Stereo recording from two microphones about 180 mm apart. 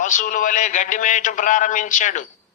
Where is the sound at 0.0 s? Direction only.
45° left (ahead or behind).